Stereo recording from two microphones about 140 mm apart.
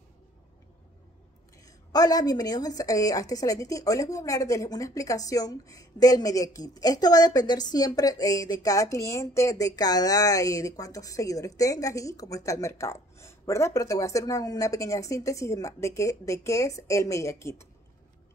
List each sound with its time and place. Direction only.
1.6 s a woman's voice: 25° left (ahead or behind)